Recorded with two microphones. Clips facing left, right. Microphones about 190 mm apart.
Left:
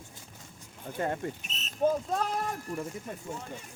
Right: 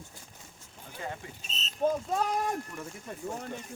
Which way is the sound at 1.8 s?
10° left (ahead or behind).